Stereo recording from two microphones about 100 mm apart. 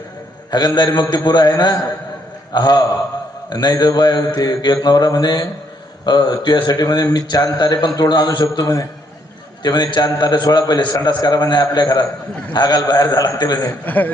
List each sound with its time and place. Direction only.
0.5 s mantra: 45° left (ahead or behind)
12.5 s a man's voice: 40° left (ahead or behind)
13.8 s speech: 15° left (ahead or behind)